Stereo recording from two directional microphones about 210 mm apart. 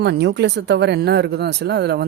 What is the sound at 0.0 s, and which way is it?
Speech, 55° right (ahead or behind).